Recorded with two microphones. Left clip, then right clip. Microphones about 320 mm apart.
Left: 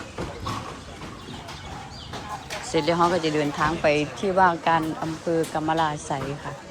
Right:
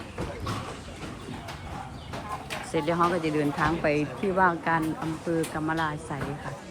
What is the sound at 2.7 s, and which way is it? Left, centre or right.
A woman's voice, centre.